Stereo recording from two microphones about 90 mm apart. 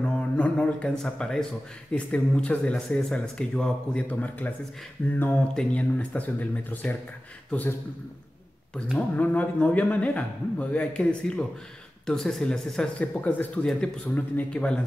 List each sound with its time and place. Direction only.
0.0 s speech: 10° left (ahead or behind)
8.9 s speech: 20° left (ahead or behind)